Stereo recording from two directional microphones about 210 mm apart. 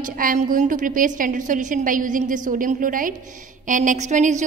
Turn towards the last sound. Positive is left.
turn(degrees=-35)  # may be behind; listen again after turning